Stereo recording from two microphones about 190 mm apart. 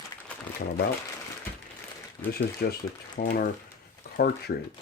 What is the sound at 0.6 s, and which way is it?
Speech, 60° left (ahead or behind).